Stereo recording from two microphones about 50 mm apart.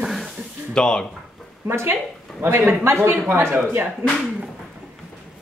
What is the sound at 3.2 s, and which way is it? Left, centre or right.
Speech, right.